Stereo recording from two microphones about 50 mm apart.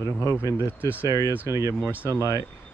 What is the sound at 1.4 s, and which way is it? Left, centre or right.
Speech, right.